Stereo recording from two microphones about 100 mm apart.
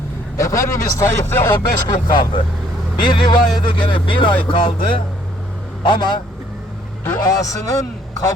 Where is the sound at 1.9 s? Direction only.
50° left (ahead or behind).